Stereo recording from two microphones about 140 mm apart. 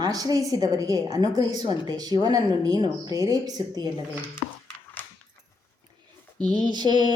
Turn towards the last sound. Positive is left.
turn(degrees=-30)  # may be behind; listen again after turning